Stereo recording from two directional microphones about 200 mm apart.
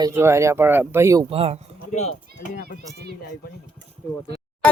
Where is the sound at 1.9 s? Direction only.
35° left (ahead or behind).